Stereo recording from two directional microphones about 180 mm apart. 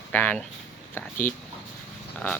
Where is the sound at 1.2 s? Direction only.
50° left (ahead or behind).